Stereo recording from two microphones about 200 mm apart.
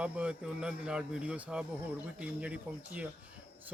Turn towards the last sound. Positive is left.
turn(degrees=-5)  # may be behind; listen again after turning